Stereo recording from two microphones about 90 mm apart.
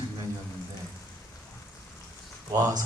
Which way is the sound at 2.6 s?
40° right (ahead or behind).